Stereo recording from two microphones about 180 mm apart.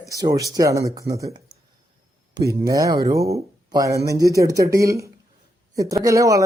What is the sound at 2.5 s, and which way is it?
Speech, 20° right (ahead or behind).